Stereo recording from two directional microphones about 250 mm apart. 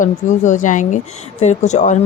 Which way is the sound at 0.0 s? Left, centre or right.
Left.